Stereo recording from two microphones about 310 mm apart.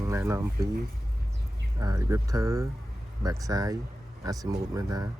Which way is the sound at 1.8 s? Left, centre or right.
Centre.